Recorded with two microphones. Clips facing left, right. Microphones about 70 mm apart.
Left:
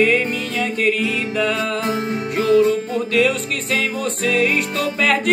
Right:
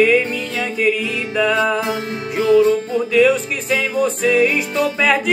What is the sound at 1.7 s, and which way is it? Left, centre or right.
Music, centre.